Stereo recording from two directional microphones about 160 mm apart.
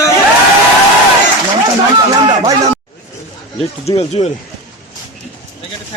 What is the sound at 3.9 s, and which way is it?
Speech, 40° left (ahead or behind).